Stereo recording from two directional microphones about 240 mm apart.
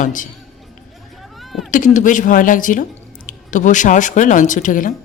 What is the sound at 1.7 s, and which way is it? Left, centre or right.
Speech, left.